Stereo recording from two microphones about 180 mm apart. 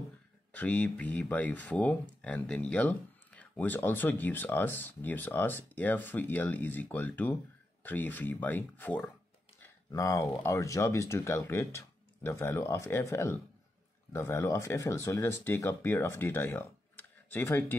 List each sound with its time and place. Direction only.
0.5 s speech: 10° left (ahead or behind)